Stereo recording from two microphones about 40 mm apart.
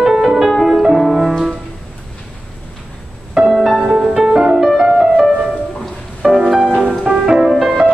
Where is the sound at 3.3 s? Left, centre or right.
Centre.